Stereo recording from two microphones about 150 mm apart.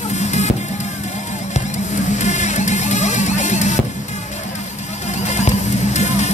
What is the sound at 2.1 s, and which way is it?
Music, 50° left (ahead or behind).